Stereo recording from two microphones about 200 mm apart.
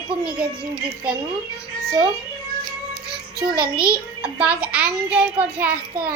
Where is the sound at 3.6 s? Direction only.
5° right (ahead or behind).